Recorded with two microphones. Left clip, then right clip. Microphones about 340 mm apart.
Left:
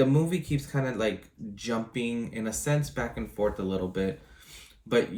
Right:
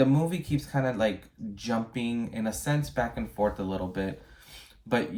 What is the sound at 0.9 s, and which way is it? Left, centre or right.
Speech, right.